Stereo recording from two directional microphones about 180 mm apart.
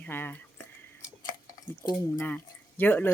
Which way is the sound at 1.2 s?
20° left (ahead or behind).